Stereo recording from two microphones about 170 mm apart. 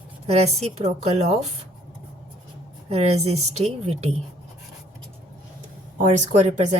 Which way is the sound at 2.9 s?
40° right (ahead or behind).